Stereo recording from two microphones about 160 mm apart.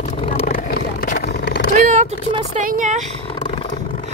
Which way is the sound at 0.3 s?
65° left (ahead or behind).